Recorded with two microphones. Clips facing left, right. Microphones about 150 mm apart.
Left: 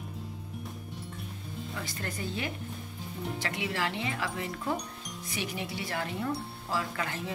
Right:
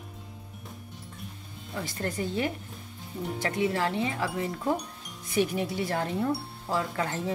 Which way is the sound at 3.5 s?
35° right (ahead or behind).